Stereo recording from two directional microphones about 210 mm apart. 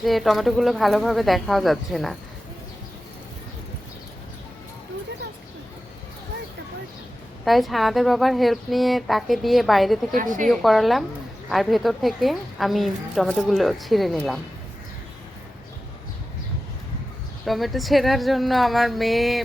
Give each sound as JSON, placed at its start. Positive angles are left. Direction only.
{"t": 0.0, "sound": "a woman's voice", "side_deg": 0}
{"t": 7.4, "sound": "a woman's voice", "side_deg": 0}
{"t": 10.2, "sound": "a woman's voice", "side_deg": -40}
{"t": 10.5, "sound": "a woman's voice", "side_deg": 0}
{"t": 17.4, "sound": "a woman's voice", "side_deg": 0}